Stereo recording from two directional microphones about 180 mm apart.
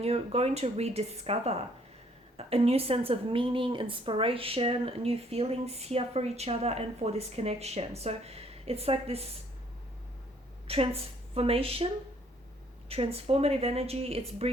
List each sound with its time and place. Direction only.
0.0 s a woman's voice: 35° right (ahead or behind)
10.7 s a woman's voice: 30° right (ahead or behind)
12.9 s a woman's voice: 35° right (ahead or behind)